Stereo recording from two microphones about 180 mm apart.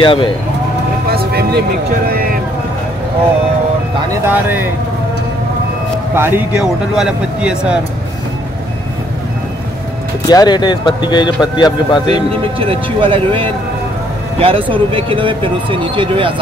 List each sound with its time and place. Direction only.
0.0 s speech: 25° left (ahead or behind)
1.1 s vehicle: 60° right (ahead or behind)
4.1 s speech: 10° right (ahead or behind)
6.1 s speech: 10° right (ahead or behind)
10.2 s speech: 20° left (ahead or behind)
12.5 s speech: 30° right (ahead or behind)